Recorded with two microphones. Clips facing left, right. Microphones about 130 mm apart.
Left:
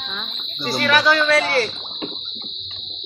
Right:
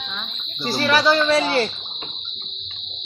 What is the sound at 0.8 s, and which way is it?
Speech, 30° right (ahead or behind).